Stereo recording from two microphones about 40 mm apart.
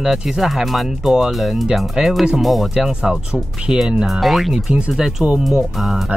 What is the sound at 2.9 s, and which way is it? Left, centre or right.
Speech, centre.